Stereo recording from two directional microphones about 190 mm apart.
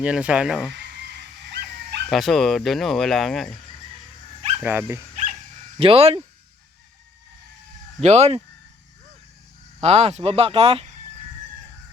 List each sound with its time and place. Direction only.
0.0 s speech: 5° right (ahead or behind)
2.0 s speech: centre (ahead or behind)
4.5 s speech: 10° right (ahead or behind)
5.8 s speech: 30° right (ahead or behind)
8.0 s speech: 35° right (ahead or behind)
9.8 s speech: 35° right (ahead or behind)